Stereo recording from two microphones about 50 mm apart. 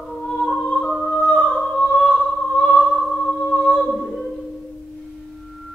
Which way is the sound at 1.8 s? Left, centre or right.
Left.